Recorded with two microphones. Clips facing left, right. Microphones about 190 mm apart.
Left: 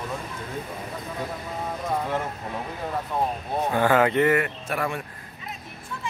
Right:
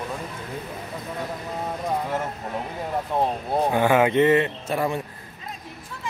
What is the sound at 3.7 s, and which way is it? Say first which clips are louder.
Speech: right 1 dB; 15° right (ahead or behind).